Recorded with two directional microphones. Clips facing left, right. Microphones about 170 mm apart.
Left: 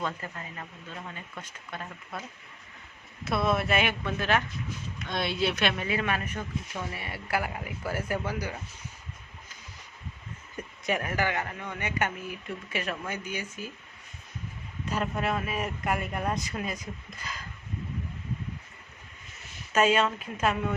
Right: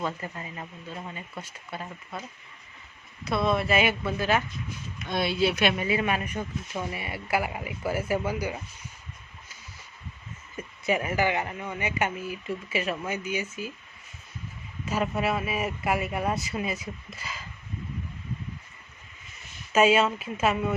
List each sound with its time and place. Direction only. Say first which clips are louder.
0.0 s speech: right 2 dB; 15° right (ahead or behind)
3.2 s speech: right 2 dB; centre (ahead or behind)
10.6 s speech: right 3 dB; 5° right (ahead or behind)
14.8 s speech: right 3 dB; 5° right (ahead or behind)
19.7 s speech: right 3 dB; 10° right (ahead or behind)